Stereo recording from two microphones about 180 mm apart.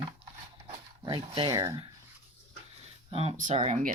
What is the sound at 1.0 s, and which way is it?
Speech, 25° right (ahead or behind).